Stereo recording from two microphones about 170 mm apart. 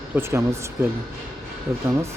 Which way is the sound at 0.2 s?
15° right (ahead or behind).